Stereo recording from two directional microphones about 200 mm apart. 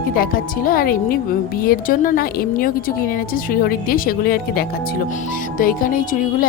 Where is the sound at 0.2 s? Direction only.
45° left (ahead or behind).